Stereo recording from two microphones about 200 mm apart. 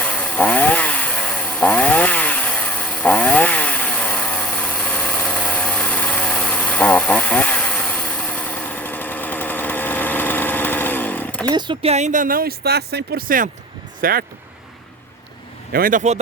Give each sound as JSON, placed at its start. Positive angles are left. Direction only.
{"t": 0.0, "sound": "chainsaw", "side_deg": 5}
{"t": 11.5, "sound": "speech", "side_deg": -25}
{"t": 15.7, "sound": "a man's voice", "side_deg": -45}